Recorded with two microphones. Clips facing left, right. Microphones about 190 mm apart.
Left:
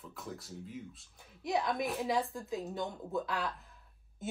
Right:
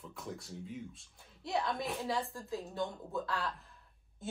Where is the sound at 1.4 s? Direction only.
20° left (ahead or behind).